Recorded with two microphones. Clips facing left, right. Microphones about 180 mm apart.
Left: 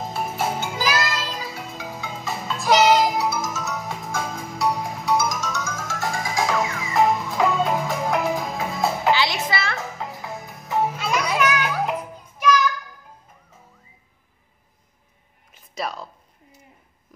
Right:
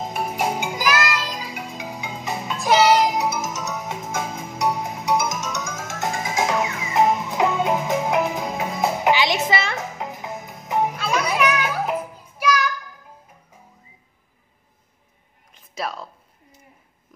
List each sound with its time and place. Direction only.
0.0 s music: 15° right (ahead or behind)
11.2 s music: centre (ahead or behind)
15.5 s a sound: centre (ahead or behind)